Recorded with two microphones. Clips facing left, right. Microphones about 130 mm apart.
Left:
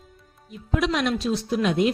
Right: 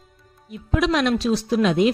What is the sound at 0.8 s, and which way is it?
Speech, 85° right.